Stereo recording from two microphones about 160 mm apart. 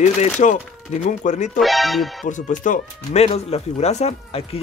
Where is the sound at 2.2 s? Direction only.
55° left (ahead or behind).